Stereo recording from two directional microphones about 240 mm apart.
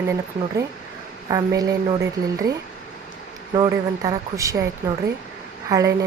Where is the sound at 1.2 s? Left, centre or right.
Centre.